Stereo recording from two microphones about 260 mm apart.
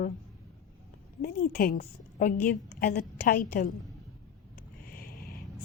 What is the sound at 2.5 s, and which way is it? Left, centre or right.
Speech, left.